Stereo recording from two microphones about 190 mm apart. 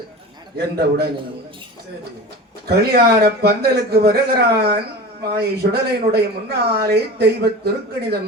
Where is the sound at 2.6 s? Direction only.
55° right (ahead or behind).